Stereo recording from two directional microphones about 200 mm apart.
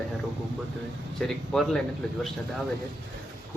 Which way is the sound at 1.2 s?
Centre (ahead or behind).